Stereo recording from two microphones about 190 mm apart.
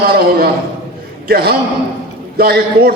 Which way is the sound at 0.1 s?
55° right (ahead or behind).